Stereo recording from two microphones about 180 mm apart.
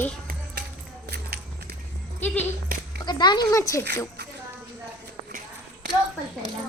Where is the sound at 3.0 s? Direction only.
25° left (ahead or behind).